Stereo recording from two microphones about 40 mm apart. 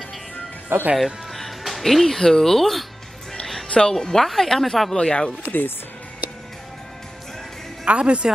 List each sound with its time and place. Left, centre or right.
0.9 s music: centre
1.6 s speech: centre
3.6 s music: left
3.9 s speech: centre
4.9 s speech: left
5.4 s speech: left
7.8 s speech: right